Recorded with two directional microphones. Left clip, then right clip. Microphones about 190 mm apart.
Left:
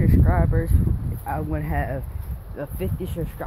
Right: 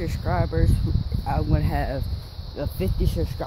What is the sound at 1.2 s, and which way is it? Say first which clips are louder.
Speech: right 1 dB; 10° right (ahead or behind).